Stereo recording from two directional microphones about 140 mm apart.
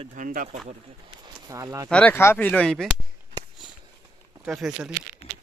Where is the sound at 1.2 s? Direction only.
25° right (ahead or behind).